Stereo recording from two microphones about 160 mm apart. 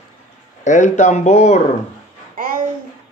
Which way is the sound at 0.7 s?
50° left (ahead or behind).